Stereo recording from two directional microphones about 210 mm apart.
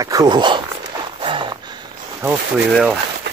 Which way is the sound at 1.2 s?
25° right (ahead or behind).